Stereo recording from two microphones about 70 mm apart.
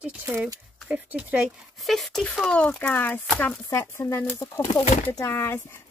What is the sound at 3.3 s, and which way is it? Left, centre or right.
Chopping, centre.